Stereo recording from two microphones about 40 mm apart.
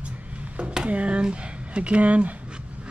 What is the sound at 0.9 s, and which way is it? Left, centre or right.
Speech, right.